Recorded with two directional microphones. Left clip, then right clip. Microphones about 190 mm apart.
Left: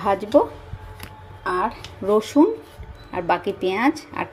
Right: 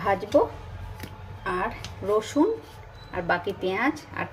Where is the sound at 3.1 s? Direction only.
30° left (ahead or behind).